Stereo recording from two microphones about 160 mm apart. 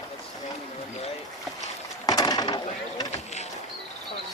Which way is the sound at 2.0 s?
25° left (ahead or behind).